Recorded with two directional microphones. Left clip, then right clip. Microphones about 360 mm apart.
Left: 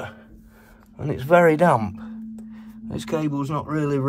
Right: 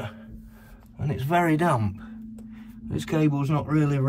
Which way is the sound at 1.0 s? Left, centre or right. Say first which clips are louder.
Left 8 dB; left.